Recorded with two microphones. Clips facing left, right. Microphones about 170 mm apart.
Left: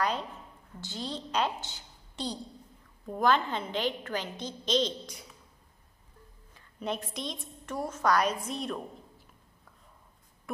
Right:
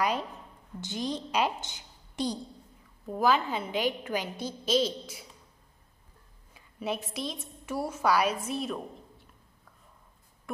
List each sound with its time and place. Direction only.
0.7 s a woman's voice: 15° right (ahead or behind)
6.5 s a woman's voice: 5° right (ahead or behind)